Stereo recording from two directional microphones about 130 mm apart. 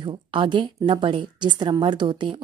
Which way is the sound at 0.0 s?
40° right (ahead or behind).